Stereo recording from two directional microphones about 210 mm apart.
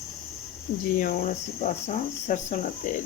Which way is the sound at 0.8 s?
40° left (ahead or behind).